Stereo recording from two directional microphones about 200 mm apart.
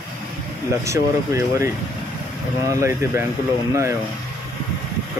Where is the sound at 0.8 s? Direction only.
15° right (ahead or behind).